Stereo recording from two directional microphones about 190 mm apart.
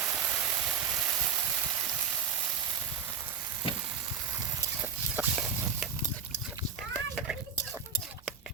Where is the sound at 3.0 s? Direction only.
10° right (ahead or behind).